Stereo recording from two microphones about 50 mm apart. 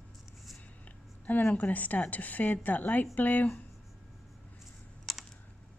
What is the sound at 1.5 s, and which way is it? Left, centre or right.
Speech, left.